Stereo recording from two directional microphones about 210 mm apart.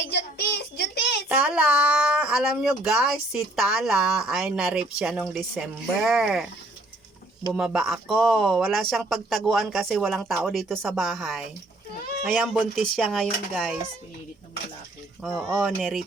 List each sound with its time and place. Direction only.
0.0 s child singing: 50° left (ahead or behind)
1.3 s speech: 5° right (ahead or behind)
7.5 s speech: 5° right (ahead or behind)
15.2 s speech: 5° right (ahead or behind)